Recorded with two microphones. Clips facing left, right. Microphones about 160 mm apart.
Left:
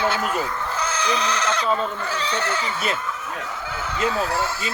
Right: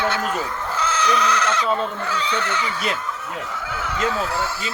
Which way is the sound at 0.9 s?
30° left (ahead or behind).